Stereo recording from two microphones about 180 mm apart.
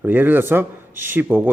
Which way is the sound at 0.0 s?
10° right (ahead or behind).